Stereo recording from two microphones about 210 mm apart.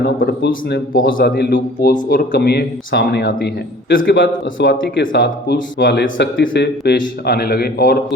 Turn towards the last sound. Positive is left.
turn(degrees=45)  # may be behind; listen again after turning